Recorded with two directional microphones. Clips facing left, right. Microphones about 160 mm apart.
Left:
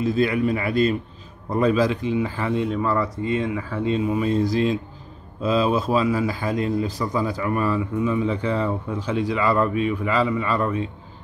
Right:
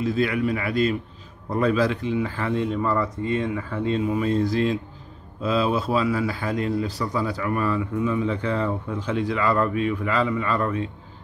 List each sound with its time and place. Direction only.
0.0 s a man's voice: 25° left (ahead or behind)